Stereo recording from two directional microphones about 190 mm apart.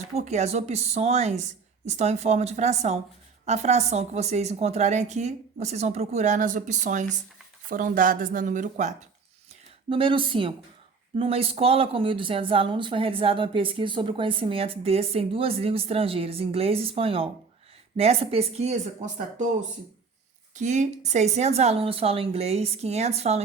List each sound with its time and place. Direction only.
0.2 s speech: 35° right (ahead or behind)
9.9 s speech: 25° right (ahead or behind)
20.6 s speech: 40° right (ahead or behind)